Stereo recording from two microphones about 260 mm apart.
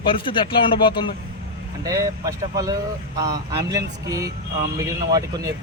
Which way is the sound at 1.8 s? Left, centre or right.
Centre.